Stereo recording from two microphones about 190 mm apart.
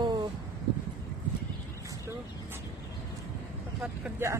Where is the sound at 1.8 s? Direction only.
15° right (ahead or behind).